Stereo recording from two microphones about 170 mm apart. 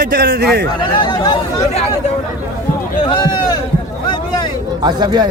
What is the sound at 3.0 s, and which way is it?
Speech, 30° left (ahead or behind).